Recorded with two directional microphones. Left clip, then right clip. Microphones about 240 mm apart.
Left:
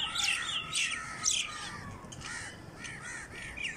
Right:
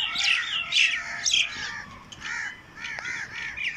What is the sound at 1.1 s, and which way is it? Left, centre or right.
Bird, centre.